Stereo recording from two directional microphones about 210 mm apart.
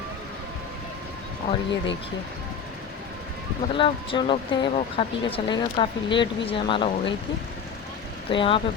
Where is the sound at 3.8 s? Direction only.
25° left (ahead or behind).